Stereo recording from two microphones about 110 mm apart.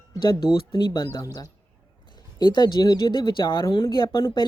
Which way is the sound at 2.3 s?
40° left (ahead or behind).